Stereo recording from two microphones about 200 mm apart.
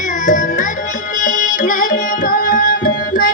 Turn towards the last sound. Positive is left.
turn(degrees=45)  # may be behind; listen again after turning